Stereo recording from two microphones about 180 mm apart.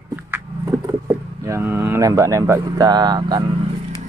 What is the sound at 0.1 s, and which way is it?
Vehicle, 15° right (ahead or behind).